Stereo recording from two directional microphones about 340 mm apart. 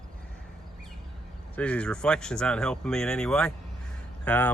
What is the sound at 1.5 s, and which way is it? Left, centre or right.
Speech, centre.